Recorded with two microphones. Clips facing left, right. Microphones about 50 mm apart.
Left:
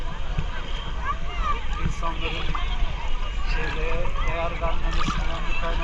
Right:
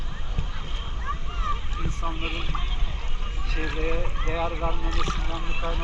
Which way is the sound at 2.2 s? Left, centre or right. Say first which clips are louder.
Left 1 dB; centre.